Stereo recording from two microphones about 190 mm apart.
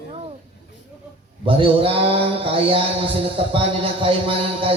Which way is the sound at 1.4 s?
30° right (ahead or behind).